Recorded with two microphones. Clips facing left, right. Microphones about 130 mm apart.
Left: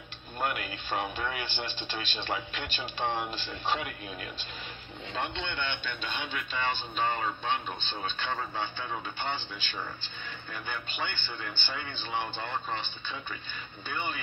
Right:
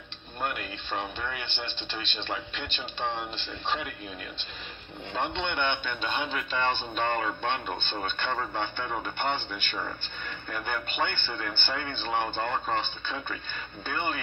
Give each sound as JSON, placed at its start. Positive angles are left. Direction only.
{"t": 0.4, "sound": "speech", "side_deg": 5}
{"t": 5.4, "sound": "speech", "side_deg": -55}